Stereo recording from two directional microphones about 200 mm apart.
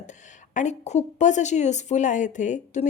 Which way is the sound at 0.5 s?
35° left (ahead or behind).